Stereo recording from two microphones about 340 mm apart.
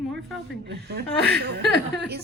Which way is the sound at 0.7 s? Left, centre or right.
Right.